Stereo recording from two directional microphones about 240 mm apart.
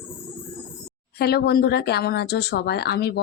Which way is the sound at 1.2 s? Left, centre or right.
Left.